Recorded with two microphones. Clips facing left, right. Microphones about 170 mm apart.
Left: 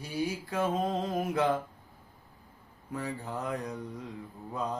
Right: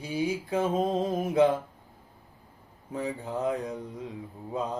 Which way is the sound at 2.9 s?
20° right (ahead or behind).